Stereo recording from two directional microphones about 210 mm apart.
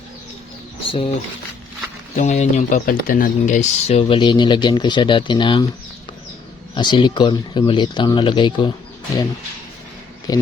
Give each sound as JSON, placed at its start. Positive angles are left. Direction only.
{"t": 0.9, "sound": "speech", "side_deg": 25}
{"t": 2.1, "sound": "speech", "side_deg": 35}
{"t": 6.7, "sound": "speech", "side_deg": 20}
{"t": 10.3, "sound": "speech", "side_deg": 15}